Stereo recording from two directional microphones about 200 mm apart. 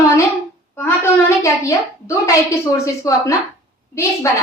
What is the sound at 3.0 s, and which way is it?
Speech, 15° left (ahead or behind).